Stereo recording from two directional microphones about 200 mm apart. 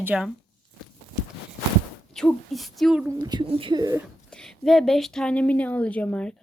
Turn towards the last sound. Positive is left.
turn(degrees=5)  # may be behind; listen again after turning